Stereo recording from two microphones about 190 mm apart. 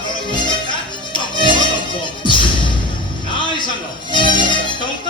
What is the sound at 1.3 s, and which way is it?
Music, 25° left (ahead or behind).